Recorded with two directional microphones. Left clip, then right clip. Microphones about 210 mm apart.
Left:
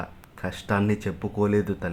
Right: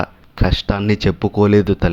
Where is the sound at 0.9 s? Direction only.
40° right (ahead or behind).